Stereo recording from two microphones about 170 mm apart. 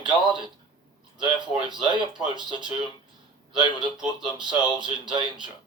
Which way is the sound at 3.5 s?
25° right (ahead or behind).